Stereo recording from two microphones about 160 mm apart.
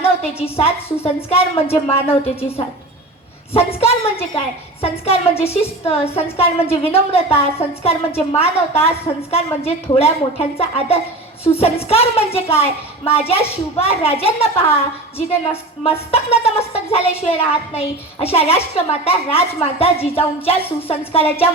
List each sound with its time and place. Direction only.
0.0 s a woman's voice: 35° left (ahead or behind)